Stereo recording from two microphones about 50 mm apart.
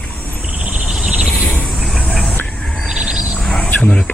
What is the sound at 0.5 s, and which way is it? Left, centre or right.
Cricket, right.